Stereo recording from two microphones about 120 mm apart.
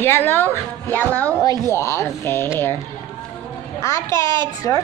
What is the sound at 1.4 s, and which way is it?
Speech, 25° left (ahead or behind).